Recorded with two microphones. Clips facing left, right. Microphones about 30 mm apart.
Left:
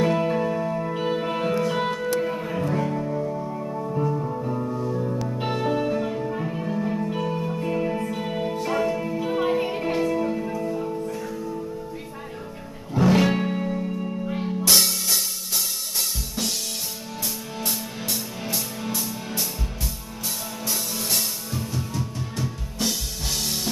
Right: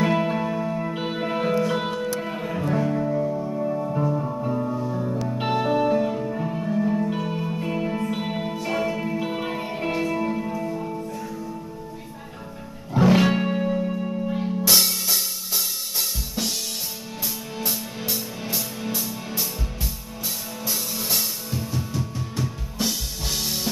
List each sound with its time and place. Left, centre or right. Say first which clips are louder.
0.0 s music: even; centre
3.6 s music: right 1 dB; centre
7.1 s music: even; centre
8.1 s music: even; centre
12.9 s music: right 1 dB; centre
17.6 s music: right 1 dB; centre
20.6 s music: even; centre